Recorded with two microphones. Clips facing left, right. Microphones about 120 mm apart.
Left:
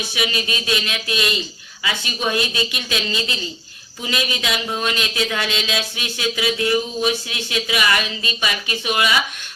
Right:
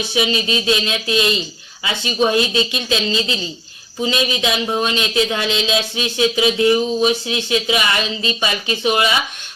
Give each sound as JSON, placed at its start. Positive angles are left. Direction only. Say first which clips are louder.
{"t": 0.1, "sound": "speech", "louder": "right 6 dB", "side_deg": -25}